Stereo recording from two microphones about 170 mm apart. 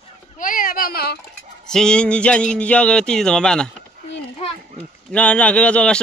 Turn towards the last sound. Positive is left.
turn(degrees=5)  # may be behind; listen again after turning